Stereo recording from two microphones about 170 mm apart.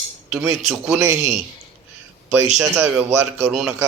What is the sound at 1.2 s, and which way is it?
Speech, 40° right (ahead or behind).